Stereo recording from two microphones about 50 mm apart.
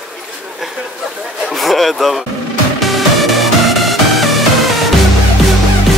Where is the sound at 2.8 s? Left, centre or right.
Centre.